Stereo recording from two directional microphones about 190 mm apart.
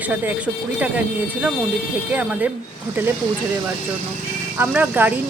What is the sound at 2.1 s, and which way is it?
Speech, 10° right (ahead or behind).